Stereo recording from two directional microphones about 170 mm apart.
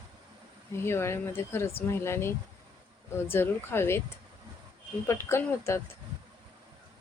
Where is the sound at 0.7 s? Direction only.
15° left (ahead or behind).